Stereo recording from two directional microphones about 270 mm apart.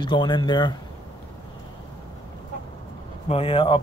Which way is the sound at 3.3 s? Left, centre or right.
Centre.